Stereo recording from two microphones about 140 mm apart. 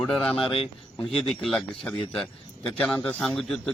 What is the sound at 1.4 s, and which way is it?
A man's voice, 5° left (ahead or behind).